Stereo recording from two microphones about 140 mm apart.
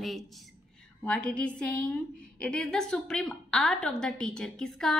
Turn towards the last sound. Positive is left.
turn(degrees=5)  # may be behind; listen again after turning